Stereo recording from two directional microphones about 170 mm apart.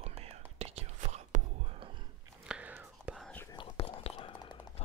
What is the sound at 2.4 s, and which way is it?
Whispering, 5° right (ahead or behind).